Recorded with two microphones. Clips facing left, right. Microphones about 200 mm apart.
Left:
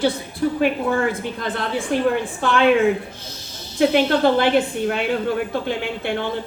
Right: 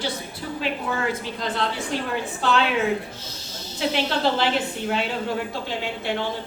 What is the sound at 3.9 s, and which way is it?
A woman's voice, 55° left (ahead or behind).